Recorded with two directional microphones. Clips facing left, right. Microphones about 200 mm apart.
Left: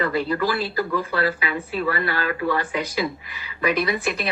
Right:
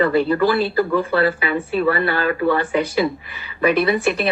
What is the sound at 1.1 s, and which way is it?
Speech, 60° right (ahead or behind).